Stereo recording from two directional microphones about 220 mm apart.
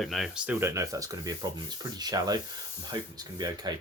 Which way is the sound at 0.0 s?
Centre (ahead or behind).